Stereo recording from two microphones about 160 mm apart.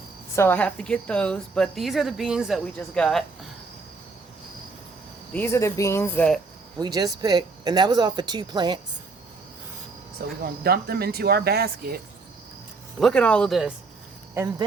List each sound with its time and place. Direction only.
0.3 s a woman's voice: 10° left (ahead or behind)
5.3 s speech: 15° left (ahead or behind)
6.7 s speech: 25° right (ahead or behind)
10.4 s speech: 70° right (ahead or behind)
13.0 s a woman's voice: 5° left (ahead or behind)